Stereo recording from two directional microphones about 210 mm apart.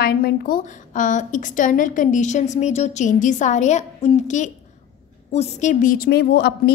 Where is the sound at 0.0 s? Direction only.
45° left (ahead or behind).